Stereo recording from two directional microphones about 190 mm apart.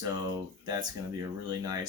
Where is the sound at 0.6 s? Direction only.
20° right (ahead or behind).